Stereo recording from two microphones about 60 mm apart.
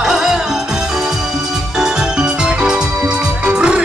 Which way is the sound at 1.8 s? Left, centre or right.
Centre.